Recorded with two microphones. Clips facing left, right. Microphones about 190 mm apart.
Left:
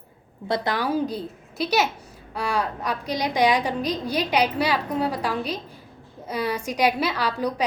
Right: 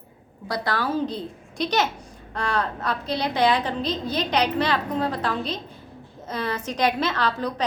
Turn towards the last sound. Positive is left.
turn(degrees=10)  # may be behind; listen again after turning